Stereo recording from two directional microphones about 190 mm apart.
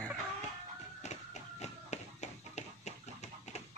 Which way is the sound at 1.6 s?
35° left (ahead or behind).